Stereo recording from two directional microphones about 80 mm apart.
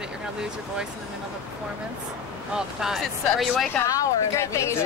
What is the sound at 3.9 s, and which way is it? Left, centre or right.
Speech, left.